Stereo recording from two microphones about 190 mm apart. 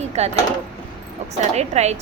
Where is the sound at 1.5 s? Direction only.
35° right (ahead or behind).